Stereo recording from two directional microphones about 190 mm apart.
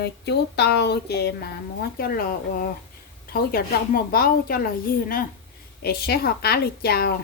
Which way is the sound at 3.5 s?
50° left (ahead or behind).